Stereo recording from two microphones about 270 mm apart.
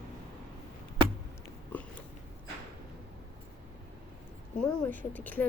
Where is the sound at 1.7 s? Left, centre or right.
Centre.